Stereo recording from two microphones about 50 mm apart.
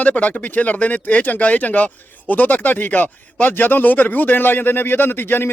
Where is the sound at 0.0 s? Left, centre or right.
Left.